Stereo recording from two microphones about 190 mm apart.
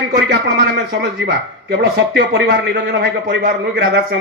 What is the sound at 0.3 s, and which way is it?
Speech, 60° right (ahead or behind).